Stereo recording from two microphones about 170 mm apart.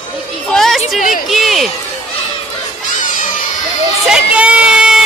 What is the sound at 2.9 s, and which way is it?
Crowd, 50° left (ahead or behind).